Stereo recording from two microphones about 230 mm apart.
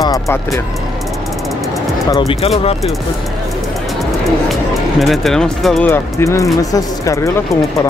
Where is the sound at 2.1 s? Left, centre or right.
Centre.